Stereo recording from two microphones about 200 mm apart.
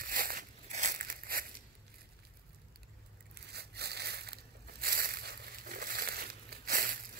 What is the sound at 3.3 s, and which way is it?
Crushing, 55° right (ahead or behind).